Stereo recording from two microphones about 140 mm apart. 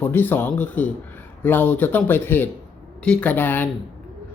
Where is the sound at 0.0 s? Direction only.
15° left (ahead or behind).